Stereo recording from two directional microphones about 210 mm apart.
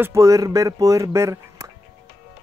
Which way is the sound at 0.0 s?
15° right (ahead or behind).